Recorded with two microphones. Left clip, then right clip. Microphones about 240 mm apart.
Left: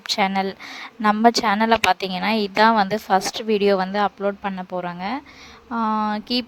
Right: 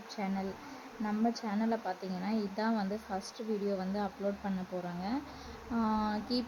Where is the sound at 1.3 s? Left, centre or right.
Left.